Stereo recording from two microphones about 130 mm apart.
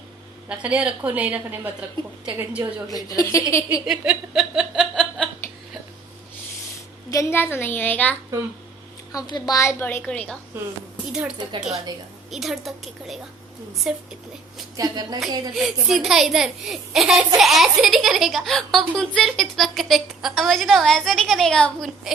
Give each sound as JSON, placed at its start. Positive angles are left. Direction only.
{"t": 0.4, "sound": "a woman's voice", "side_deg": -10}
{"t": 2.9, "sound": "a woman's voice", "side_deg": 25}
{"t": 3.8, "sound": "a sound", "side_deg": -5}
{"t": 7.1, "sound": "a woman's voice", "side_deg": 20}
{"t": 9.1, "sound": "a woman's voice", "side_deg": 30}
{"t": 11.1, "sound": "a woman's voice", "side_deg": -5}
{"t": 14.8, "sound": "a woman's voice", "side_deg": -30}
{"t": 15.5, "sound": "speech", "side_deg": 0}